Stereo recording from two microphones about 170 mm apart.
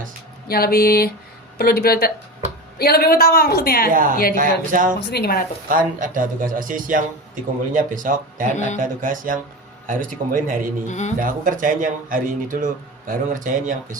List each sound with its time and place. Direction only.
0.4 s a woman's voice: 65° left (ahead or behind)
4.4 s speech: 50° right (ahead or behind)
4.9 s speech: 70° left (ahead or behind)
5.6 s speech: 50° right (ahead or behind)
8.5 s speech: 45° left (ahead or behind)
8.8 s speech: 50° right (ahead or behind)
10.8 s speech: 45° left (ahead or behind)
11.2 s speech: 55° right (ahead or behind)